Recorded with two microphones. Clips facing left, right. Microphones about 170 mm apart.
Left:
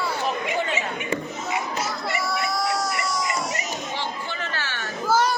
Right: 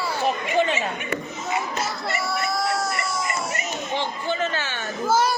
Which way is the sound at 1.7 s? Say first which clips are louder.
Even; 25° right (ahead or behind).